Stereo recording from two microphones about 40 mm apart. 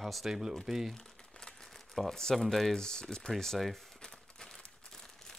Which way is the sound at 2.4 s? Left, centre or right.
Centre.